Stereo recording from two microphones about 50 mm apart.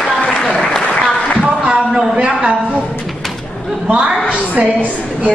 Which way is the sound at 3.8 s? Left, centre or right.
Right.